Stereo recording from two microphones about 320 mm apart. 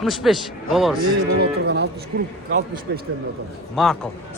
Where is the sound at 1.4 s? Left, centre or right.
Right.